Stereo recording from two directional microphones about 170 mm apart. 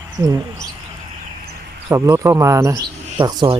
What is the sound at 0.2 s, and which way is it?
Speech, 20° right (ahead or behind).